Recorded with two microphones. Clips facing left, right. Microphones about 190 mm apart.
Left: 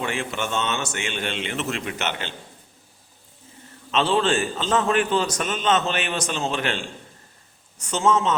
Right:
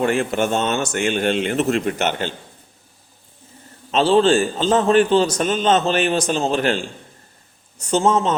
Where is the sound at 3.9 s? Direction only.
35° right (ahead or behind).